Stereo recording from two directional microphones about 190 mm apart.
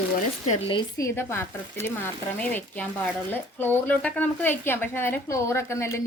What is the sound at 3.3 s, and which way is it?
Speech, 10° left (ahead or behind).